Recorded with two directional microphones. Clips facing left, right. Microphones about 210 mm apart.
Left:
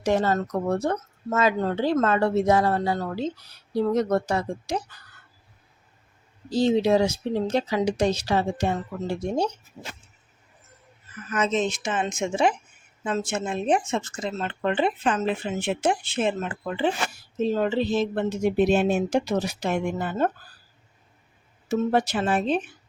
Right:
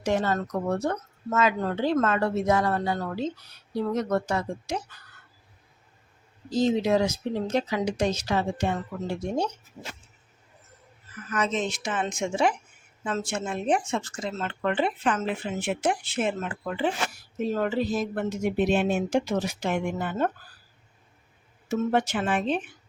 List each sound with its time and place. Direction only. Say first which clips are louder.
0.0 s speech: left 3 dB; 35° left (ahead or behind)
6.5 s speech: left 3 dB; 30° left (ahead or behind)
11.3 s speech: left 3 dB; 25° left (ahead or behind)
21.7 s speech: left 2 dB; 35° left (ahead or behind)